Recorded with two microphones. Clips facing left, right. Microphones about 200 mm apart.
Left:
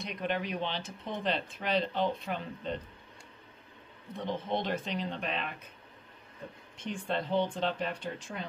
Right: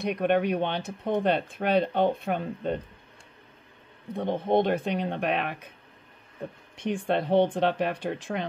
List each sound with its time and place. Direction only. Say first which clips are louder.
0.0 s speech: right 10 dB; 60° right (ahead or behind)
4.1 s speech: right 9 dB; 55° right (ahead or behind)
6.8 s speech: right 7 dB; 65° right (ahead or behind)